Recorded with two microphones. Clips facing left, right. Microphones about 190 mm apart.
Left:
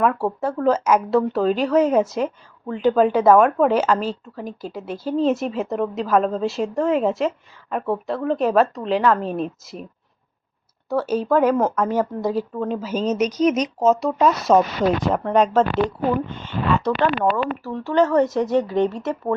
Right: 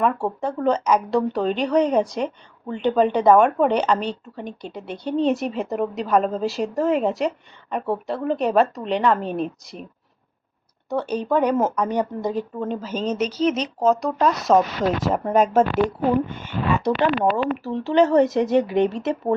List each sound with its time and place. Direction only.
0.0 s speech: centre (ahead or behind)
10.8 s speech: 5° left (ahead or behind)
16.7 s speech: 15° right (ahead or behind)